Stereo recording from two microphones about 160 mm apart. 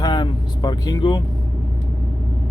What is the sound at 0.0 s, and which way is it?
Vehicle, 25° left (ahead or behind).